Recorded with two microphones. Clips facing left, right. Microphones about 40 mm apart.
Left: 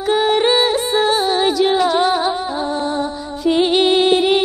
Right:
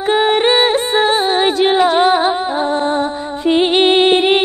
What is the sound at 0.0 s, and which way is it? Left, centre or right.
Music, right.